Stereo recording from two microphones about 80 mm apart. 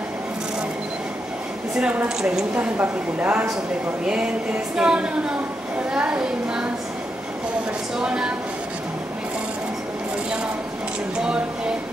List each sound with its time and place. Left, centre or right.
1.8 s a woman's voice: centre
2.0 s speech: centre
2.5 s a woman's voice: right
4.7 s speech: centre
8.0 s speech: centre
11.1 s speech: centre